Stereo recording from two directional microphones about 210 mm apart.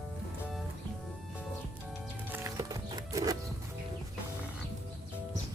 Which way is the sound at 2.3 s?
15° right (ahead or behind).